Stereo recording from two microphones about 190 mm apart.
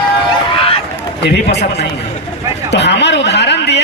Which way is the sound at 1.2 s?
65° left (ahead or behind).